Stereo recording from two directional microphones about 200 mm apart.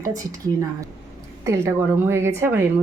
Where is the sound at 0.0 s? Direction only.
15° right (ahead or behind).